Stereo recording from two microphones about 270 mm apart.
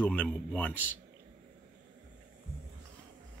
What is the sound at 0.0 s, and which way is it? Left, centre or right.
Speech, centre.